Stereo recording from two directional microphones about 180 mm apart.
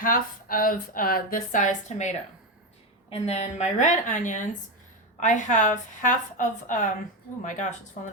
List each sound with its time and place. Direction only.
0.0 s speech: 50° left (ahead or behind)